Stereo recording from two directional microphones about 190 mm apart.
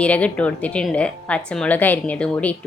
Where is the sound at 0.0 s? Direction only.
5° left (ahead or behind).